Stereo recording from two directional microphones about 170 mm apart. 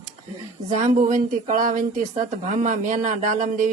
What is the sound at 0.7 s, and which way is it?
Speech, 50° right (ahead or behind).